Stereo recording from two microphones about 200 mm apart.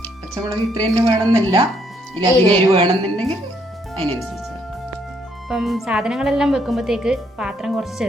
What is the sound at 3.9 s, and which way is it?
Music, 10° left (ahead or behind).